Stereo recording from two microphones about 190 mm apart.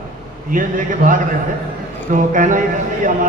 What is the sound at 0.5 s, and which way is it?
A man's voice, 45° right (ahead or behind).